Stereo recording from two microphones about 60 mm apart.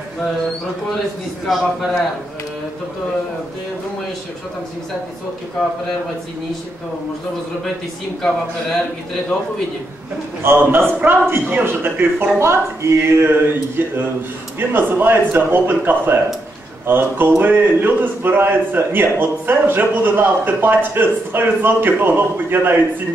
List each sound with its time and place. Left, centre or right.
1.4 s a man's voice: centre
10.4 s speech: right